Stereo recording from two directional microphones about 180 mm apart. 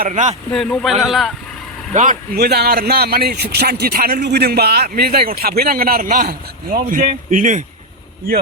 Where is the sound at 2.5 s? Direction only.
60° right (ahead or behind); by 7.6 s 45° right (ahead or behind).